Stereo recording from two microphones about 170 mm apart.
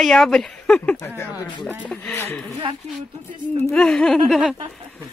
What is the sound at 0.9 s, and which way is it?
Speech, 15° left (ahead or behind).